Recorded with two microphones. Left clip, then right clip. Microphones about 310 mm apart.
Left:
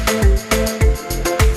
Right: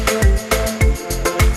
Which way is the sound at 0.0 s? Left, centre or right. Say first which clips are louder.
Even; centre.